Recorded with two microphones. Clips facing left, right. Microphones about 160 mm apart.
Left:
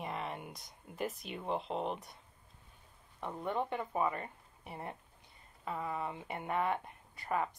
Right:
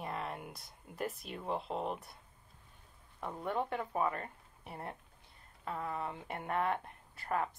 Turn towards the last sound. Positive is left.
turn(degrees=5)  # may be behind; listen again after turning